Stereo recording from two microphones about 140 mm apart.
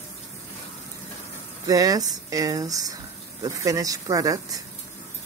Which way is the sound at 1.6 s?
25° right (ahead or behind).